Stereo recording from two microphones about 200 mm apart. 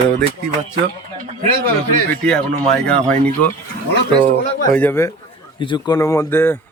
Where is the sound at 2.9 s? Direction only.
5° left (ahead or behind).